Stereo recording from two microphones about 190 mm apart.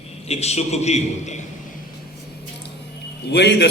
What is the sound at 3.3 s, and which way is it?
Speech, 60° left (ahead or behind).